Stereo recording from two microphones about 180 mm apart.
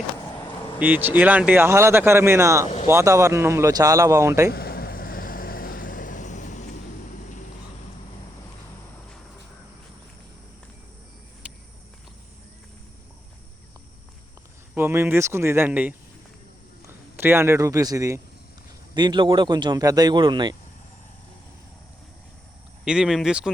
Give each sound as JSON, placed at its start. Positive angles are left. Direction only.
{"t": 0.8, "sound": "speech", "side_deg": -10}
{"t": 4.5, "sound": "vehicle", "side_deg": 60}
{"t": 11.4, "sound": "a sound", "side_deg": -5}
{"t": 14.8, "sound": "a man's voice", "side_deg": -15}
{"t": 22.8, "sound": "speech", "side_deg": -5}